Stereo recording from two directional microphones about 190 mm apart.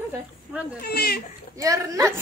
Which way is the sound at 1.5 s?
15° right (ahead or behind).